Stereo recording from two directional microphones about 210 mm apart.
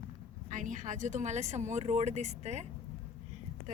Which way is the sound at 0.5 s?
35° right (ahead or behind).